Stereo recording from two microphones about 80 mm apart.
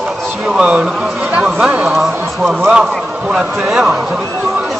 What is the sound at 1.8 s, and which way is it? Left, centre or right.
A man's voice, centre.